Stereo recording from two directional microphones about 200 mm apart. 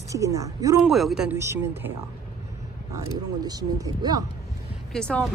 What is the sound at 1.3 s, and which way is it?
Speech, 15° right (ahead or behind).